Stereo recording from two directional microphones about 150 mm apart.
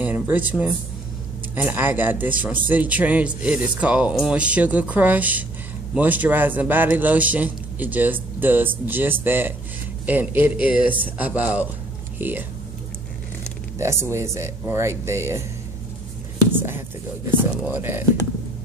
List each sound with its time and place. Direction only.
0.0 s a man's voice: 10° right (ahead or behind)
13.7 s speech: 20° right (ahead or behind)
16.3 s whispering: 15° right (ahead or behind)
17.4 s a man's voice: 15° right (ahead or behind)